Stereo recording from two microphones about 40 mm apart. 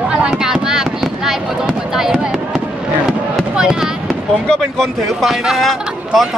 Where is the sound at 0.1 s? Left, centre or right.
Right.